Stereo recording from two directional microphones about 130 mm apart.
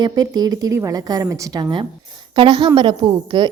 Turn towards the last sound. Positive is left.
turn(degrees=-35)  # may be behind; listen again after turning